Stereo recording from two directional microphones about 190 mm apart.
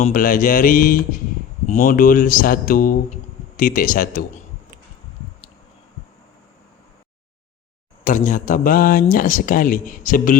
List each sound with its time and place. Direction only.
0.0 s speech: 45° left (ahead or behind)
8.0 s speech: 45° left (ahead or behind)